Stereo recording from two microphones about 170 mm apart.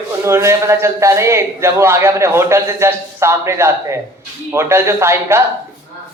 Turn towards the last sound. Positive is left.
turn(degrees=-15)  # may be behind; listen again after turning